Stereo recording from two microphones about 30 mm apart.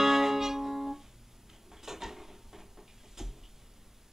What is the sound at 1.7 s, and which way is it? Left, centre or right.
Dishes, centre.